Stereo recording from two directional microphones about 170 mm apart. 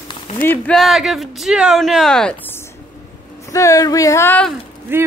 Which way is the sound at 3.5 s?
20° left (ahead or behind).